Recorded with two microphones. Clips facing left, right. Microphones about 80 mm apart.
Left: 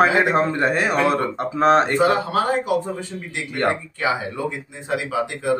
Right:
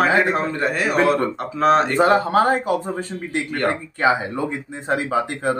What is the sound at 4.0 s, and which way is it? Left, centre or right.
A man's voice, right.